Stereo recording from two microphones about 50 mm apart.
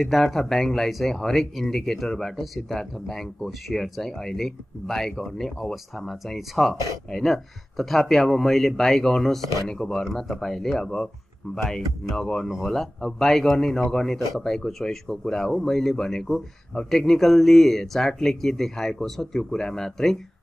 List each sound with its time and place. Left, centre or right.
0.0 s speech: centre
12.4 s speech: centre
12.7 s speech: centre